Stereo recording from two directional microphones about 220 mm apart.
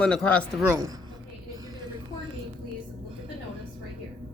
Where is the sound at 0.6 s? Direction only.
10° right (ahead or behind).